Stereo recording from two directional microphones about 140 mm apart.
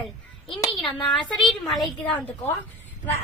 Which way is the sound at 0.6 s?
35° left (ahead or behind).